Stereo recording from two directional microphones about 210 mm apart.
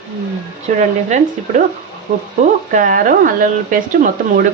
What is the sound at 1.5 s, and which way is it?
Speech, 35° right (ahead or behind).